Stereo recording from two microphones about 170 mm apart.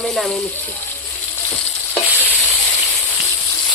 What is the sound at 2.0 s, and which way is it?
Stir, 10° left (ahead or behind).